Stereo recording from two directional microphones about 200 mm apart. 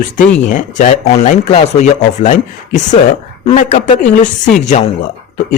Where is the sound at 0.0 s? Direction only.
40° left (ahead or behind).